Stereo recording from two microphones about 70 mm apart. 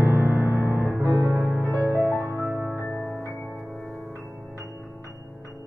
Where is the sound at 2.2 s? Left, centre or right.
Right.